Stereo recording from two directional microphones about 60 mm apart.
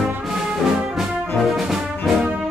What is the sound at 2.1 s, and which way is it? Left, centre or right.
Music, centre.